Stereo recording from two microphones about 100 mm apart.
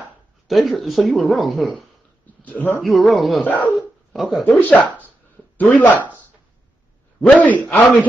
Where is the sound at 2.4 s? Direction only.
15° left (ahead or behind).